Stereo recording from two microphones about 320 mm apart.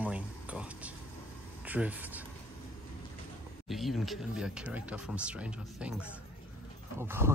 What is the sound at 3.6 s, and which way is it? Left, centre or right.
Speech, centre.